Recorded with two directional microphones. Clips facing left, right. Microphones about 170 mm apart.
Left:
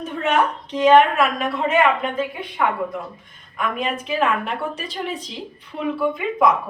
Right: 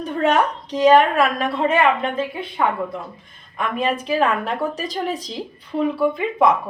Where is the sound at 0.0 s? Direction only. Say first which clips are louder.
Right 2 dB; 35° right (ahead or behind).